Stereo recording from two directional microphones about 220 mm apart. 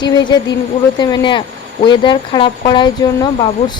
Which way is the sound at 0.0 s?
20° left (ahead or behind).